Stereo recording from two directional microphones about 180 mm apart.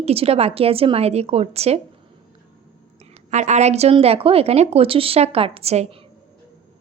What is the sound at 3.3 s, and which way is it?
A woman's voice, 40° right (ahead or behind).